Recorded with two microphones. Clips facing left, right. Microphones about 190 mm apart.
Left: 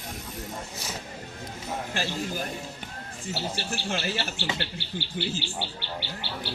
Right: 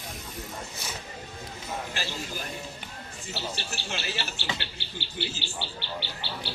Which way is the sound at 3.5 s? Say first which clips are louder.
Left 5 dB; 50° left (ahead or behind).